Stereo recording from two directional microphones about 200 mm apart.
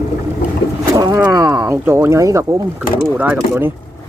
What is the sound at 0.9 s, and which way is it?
Speech, 15° right (ahead or behind).